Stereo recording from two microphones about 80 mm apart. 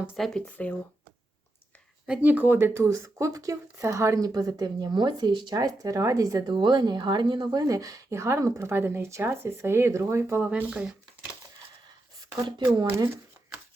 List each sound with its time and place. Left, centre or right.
0.2 s speech: centre
0.5 s speech: centre
2.0 s speech: right
6.5 s speech: right
7.5 s speech: right
10.7 s shuffling cards: centre
12.2 s speech: right